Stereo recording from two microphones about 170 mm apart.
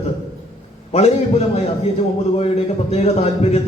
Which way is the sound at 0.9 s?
35° left (ahead or behind).